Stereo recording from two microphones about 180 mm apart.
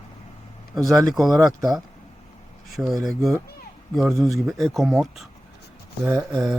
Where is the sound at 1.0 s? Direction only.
Centre (ahead or behind).